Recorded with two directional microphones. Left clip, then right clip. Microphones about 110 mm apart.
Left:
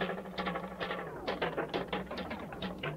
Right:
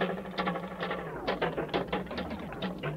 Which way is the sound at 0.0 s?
30° right (ahead or behind).